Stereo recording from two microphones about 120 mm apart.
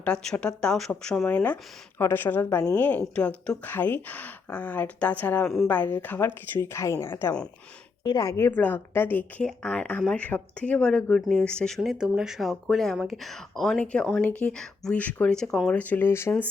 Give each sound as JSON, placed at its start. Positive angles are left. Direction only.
{"t": 0.0, "sound": "a woman's voice", "side_deg": 10}
{"t": 8.0, "sound": "speech", "side_deg": 35}
{"t": 8.4, "sound": "speech", "side_deg": 15}
{"t": 11.8, "sound": "speech", "side_deg": -5}
{"t": 15.7, "sound": "speech", "side_deg": 15}